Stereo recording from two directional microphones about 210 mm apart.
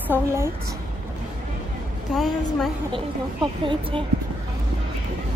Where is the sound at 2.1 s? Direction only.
Centre (ahead or behind).